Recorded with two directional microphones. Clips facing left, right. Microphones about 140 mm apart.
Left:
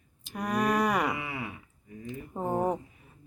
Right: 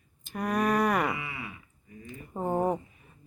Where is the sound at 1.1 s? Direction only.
50° left (ahead or behind).